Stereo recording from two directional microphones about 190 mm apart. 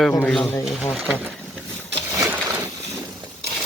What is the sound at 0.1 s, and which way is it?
Speech, 5° left (ahead or behind).